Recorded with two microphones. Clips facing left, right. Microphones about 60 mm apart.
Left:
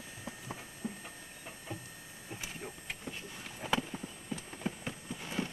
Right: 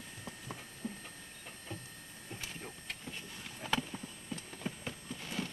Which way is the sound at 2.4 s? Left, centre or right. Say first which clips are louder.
Left 2 dB; centre.